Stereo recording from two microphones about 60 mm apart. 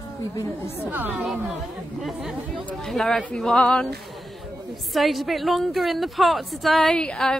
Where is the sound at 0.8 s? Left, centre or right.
Right.